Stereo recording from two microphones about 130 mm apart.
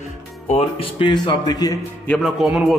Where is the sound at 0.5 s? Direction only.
45° left (ahead or behind); by 1.8 s 30° left (ahead or behind).